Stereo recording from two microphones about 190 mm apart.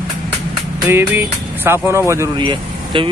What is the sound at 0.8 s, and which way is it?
Speech, 10° right (ahead or behind).